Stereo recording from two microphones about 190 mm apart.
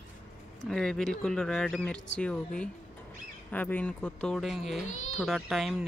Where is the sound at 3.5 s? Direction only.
10° left (ahead or behind).